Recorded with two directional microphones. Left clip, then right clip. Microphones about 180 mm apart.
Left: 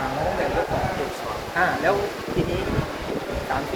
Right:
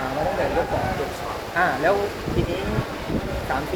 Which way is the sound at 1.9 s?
25° right (ahead or behind).